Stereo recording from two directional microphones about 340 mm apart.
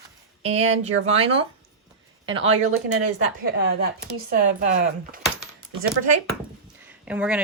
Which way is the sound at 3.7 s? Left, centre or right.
Right.